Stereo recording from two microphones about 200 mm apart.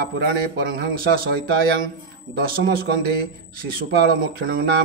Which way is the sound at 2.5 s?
50° right (ahead or behind).